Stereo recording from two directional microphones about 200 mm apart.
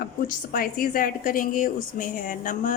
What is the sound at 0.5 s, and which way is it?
A woman's voice, 45° left (ahead or behind).